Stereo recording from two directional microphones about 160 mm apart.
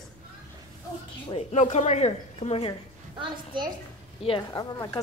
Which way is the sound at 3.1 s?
30° right (ahead or behind).